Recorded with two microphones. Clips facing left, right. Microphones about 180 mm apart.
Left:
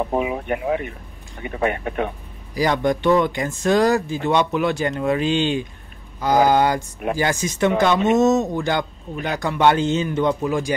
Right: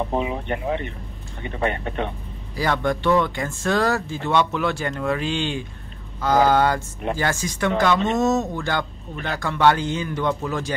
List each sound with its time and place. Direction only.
0.1 s speech: 10° left (ahead or behind)